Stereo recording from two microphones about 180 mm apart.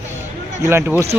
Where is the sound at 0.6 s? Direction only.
15° right (ahead or behind).